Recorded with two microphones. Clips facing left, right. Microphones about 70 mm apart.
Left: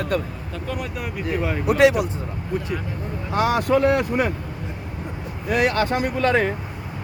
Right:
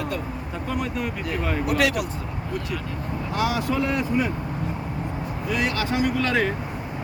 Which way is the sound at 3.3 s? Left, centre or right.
Left.